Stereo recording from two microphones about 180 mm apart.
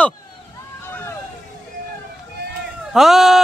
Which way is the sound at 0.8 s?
15° left (ahead or behind).